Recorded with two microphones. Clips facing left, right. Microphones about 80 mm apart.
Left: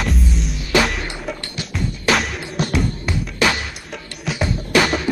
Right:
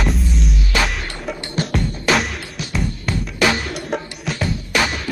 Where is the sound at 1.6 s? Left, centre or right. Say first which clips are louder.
Right 8 dB; right.